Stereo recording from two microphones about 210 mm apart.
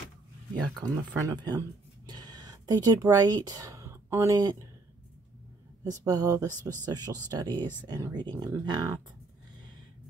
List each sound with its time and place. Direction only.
0.7 s speech: 15° right (ahead or behind)
5.9 s speech: 15° right (ahead or behind)